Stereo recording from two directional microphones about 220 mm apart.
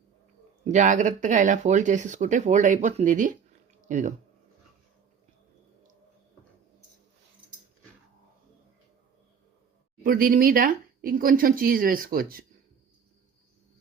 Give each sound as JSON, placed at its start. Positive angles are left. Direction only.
{"t": 0.6, "sound": "speech", "side_deg": -35}
{"t": 3.8, "sound": "a sound", "side_deg": -35}
{"t": 10.0, "sound": "speech", "side_deg": -40}